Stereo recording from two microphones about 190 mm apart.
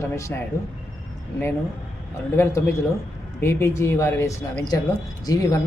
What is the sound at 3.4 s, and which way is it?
Speech, 15° left (ahead or behind).